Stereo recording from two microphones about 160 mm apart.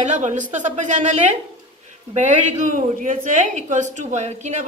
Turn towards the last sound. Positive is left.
turn(degrees=-45)  # may be behind; listen again after turning